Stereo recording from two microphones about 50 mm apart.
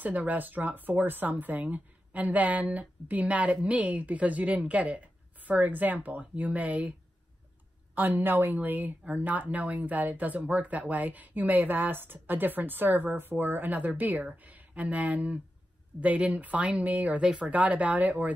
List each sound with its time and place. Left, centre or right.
0.0 s speech: right
7.9 s speech: right